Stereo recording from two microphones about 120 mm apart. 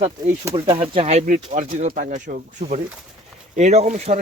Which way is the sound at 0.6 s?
45° right (ahead or behind).